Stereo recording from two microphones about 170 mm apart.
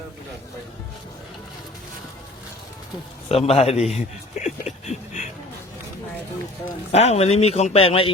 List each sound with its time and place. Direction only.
3.2 s a man's voice: 35° left (ahead or behind)
6.9 s speech: 40° left (ahead or behind)